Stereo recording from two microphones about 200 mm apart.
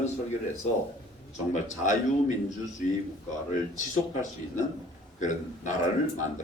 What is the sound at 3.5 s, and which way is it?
A man's voice, 40° left (ahead or behind).